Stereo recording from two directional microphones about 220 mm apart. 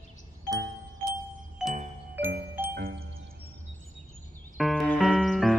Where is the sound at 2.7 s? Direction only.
45° right (ahead or behind).